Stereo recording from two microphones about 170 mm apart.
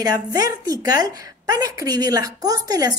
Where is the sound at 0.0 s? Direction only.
20° right (ahead or behind).